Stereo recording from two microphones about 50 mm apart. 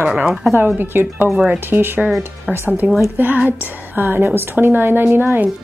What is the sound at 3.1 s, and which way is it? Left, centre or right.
Speech, right.